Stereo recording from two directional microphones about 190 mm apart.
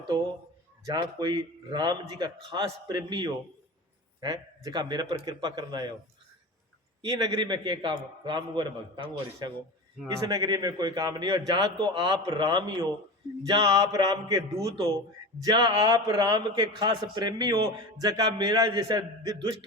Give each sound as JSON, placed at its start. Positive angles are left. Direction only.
{"t": 0.9, "sound": "a man's voice", "side_deg": -20}
{"t": 7.3, "sound": "a man's voice", "side_deg": -20}